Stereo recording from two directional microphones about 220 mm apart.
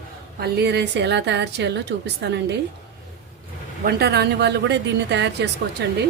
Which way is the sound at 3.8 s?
45° right (ahead or behind).